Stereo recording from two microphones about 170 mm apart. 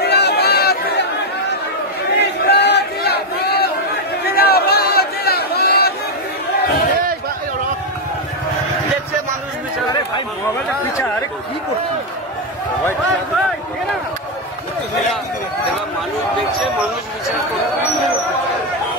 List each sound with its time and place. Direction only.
0.0 s chatter: 75° left (ahead or behind)
2.1 s battle cry: 75° left (ahead or behind)
4.3 s a sound: 65° left (ahead or behind)